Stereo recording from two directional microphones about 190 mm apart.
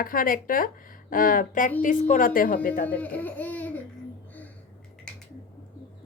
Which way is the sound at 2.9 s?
10° left (ahead or behind).